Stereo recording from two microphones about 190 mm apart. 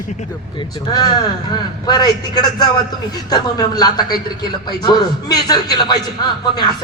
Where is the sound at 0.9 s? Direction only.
20° left (ahead or behind).